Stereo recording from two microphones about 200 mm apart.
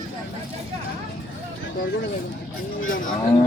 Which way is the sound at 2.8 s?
75° left (ahead or behind).